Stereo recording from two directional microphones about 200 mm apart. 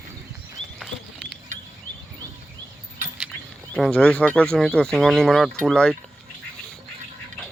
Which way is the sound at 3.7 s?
5° left (ahead or behind).